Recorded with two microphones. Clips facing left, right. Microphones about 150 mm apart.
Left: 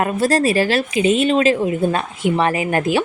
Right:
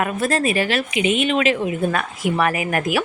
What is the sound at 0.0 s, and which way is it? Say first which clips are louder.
Speech: left 4 dB; 35° left (ahead or behind).